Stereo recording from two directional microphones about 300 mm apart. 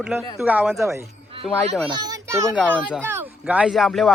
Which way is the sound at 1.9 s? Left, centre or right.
Centre.